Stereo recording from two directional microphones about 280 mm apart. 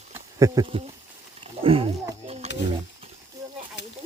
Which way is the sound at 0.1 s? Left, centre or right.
Centre.